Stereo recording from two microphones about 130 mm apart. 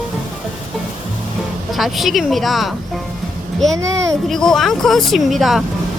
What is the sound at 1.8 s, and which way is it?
Speech, centre (ahead or behind).